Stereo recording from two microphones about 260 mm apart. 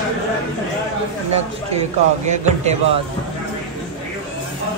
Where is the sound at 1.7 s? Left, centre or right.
Right.